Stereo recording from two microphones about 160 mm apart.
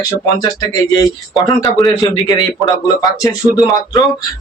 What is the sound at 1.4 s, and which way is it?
Speech, 20° left (ahead or behind).